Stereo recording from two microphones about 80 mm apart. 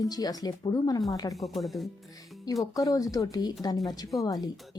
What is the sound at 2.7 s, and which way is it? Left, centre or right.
A woman's voice, left.